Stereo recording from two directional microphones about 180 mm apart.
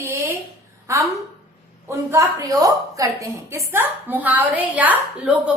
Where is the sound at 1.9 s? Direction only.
15° right (ahead or behind).